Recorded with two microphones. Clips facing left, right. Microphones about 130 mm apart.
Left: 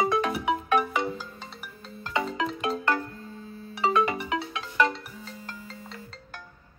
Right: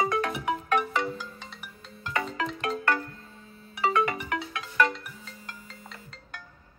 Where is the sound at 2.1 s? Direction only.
20° left (ahead or behind).